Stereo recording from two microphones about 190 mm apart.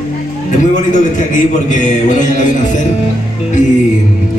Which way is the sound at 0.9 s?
40° left (ahead or behind).